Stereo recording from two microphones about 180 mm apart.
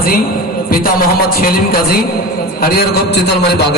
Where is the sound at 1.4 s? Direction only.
55° left (ahead or behind).